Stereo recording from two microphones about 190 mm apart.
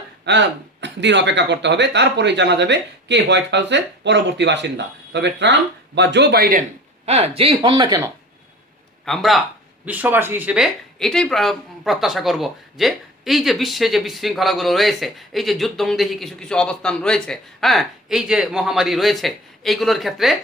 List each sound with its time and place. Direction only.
0.3 s speech: 65° right (ahead or behind)
7.0 s speech: 35° right (ahead or behind)
9.0 s speech: centre (ahead or behind)